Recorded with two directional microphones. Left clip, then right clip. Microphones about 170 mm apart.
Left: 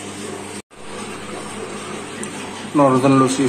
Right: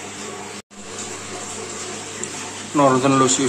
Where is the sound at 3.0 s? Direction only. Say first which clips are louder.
Left 2 dB; centre (ahead or behind).